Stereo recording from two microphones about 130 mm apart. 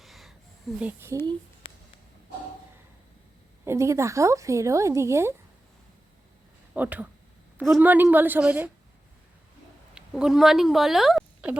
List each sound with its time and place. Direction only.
0.0 s a sound: centre (ahead or behind)
0.8 s a woman's voice: 15° right (ahead or behind)
1.6 s a sound: 40° left (ahead or behind)
3.6 s a woman's voice: 20° right (ahead or behind)
6.7 s a woman's voice: 15° right (ahead or behind)
9.9 s speech: 5° right (ahead or behind)